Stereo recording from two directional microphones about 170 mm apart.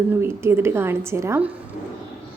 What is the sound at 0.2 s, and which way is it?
A woman's voice, 15° right (ahead or behind).